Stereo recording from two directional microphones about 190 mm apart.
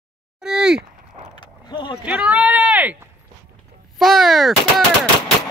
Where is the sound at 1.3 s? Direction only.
25° left (ahead or behind).